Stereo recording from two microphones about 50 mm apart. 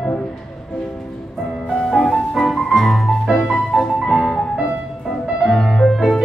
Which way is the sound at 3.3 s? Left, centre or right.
Left.